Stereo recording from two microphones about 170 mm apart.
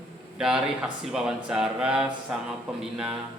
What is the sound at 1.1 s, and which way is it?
Speech, 5° right (ahead or behind).